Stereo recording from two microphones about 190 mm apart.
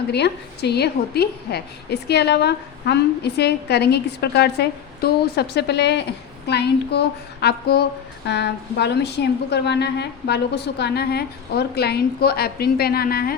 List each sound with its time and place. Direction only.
0.1 s a woman's voice: 60° left (ahead or behind)